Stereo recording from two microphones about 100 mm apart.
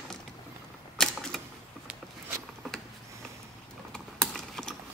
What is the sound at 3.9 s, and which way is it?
Typing, 5° left (ahead or behind).